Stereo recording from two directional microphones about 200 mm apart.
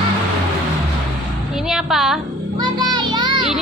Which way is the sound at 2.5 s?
20° right (ahead or behind).